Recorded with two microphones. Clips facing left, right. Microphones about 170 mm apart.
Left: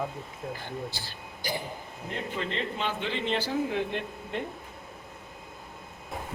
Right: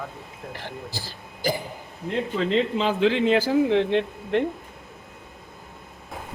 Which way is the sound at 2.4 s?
90° right.